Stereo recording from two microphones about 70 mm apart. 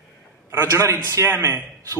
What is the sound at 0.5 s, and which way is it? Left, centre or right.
A man's voice, right.